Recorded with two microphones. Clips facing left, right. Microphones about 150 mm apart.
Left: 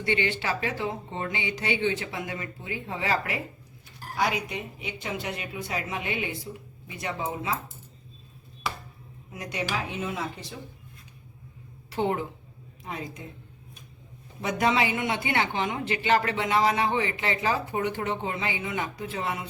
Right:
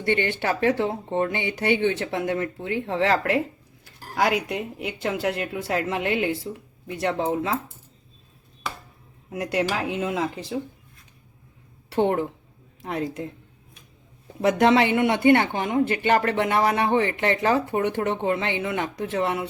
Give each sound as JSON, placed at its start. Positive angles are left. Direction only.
{"t": 0.0, "sound": "speech", "side_deg": -50}
{"t": 4.1, "sound": "a woman's voice", "side_deg": -85}
{"t": 9.3, "sound": "a woman's voice", "side_deg": -85}
{"t": 11.9, "sound": "speech", "side_deg": -60}
{"t": 12.8, "sound": "a woman's voice", "side_deg": -90}
{"t": 14.4, "sound": "speech", "side_deg": -70}